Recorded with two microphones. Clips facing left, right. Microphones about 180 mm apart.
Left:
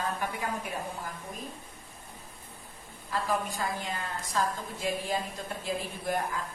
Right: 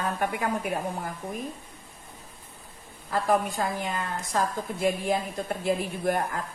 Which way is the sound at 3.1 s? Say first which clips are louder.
Right 6 dB; 60° right (ahead or behind).